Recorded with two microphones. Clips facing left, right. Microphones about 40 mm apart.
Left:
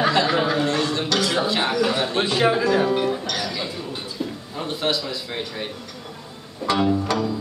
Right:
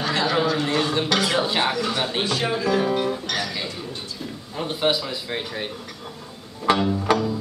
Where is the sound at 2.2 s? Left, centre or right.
Centre.